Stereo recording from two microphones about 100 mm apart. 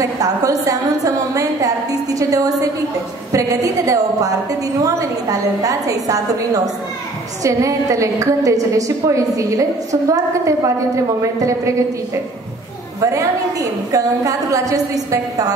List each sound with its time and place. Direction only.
0.0 s a woman's voice: 35° right (ahead or behind)
13.0 s a woman's voice: 35° right (ahead or behind)